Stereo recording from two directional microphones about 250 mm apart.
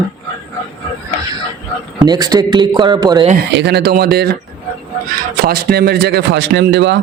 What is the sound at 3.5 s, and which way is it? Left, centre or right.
Speech, right.